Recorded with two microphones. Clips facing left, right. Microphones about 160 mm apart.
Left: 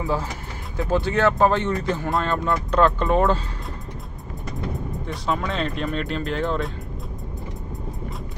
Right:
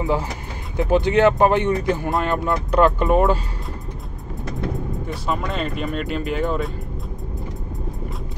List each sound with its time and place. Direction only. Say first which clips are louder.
0.0 s speech: right 3 dB; 15° right (ahead or behind)
4.7 s speech: right 3 dB; centre (ahead or behind)